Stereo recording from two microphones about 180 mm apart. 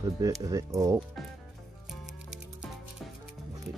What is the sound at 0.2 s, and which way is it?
Speech, 20° right (ahead or behind).